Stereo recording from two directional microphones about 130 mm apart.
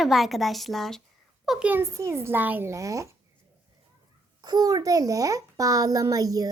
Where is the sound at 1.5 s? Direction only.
10° right (ahead or behind).